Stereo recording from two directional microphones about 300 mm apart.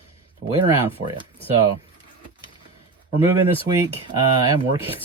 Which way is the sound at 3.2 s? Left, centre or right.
Centre.